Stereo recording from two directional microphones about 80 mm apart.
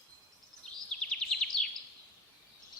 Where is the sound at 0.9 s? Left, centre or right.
Centre.